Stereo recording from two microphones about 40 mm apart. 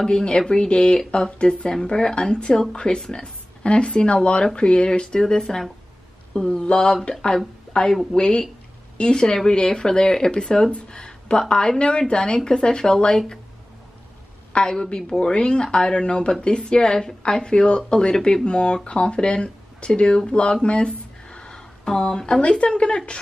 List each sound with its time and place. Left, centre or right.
0.0 s speech: left
14.5 s speech: left
20.6 s a sound: left
22.5 s speech: left